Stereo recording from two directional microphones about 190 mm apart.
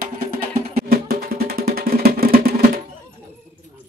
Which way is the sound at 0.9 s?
55° right (ahead or behind).